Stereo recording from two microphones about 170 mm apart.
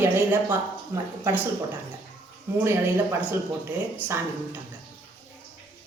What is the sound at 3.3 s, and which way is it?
Speech, 15° right (ahead or behind).